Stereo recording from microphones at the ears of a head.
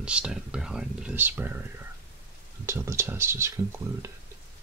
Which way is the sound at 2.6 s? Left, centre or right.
Right.